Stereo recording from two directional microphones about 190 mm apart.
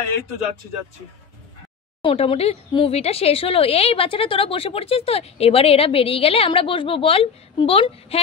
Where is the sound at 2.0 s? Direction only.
30° left (ahead or behind).